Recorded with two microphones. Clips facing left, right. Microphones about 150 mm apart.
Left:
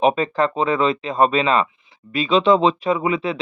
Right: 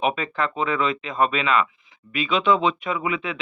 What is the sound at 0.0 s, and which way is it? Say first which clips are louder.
Speech: left 6 dB; 35° left (ahead or behind).